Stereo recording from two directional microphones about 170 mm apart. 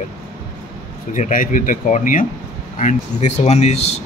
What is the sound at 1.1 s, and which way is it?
Speech, 50° left (ahead or behind).